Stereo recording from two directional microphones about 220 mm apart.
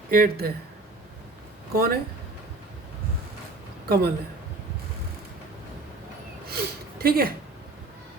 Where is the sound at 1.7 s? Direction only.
45° right (ahead or behind).